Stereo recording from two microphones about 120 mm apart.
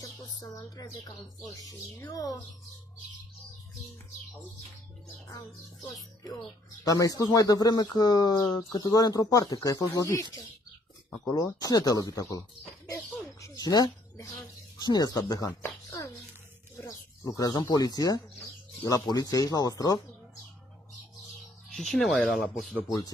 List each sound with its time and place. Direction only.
0.0 s a sound: 40° left (ahead or behind)
2.0 s speech: 30° left (ahead or behind)
5.3 s speech: 30° left (ahead or behind)
11.2 s speech: 30° left (ahead or behind)
12.9 s bird: 25° left (ahead or behind)
14.8 s speech: 35° left (ahead or behind)
21.6 s speech: 5° left (ahead or behind)